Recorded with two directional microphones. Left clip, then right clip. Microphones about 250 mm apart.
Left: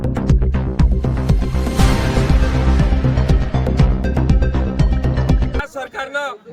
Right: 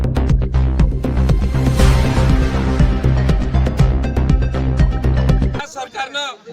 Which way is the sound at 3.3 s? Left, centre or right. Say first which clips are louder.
Left 1 dB; centre.